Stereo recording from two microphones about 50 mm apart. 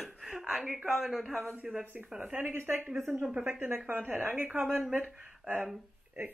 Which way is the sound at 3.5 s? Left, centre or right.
Right.